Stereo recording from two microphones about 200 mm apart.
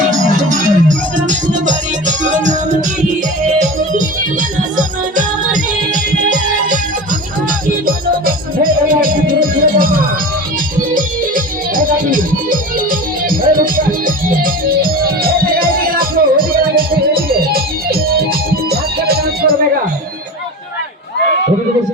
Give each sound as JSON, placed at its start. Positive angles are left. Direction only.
{"t": 0.3, "sound": "music", "side_deg": -40}
{"t": 7.9, "sound": "music", "side_deg": -45}
{"t": 10.9, "sound": "music", "side_deg": -45}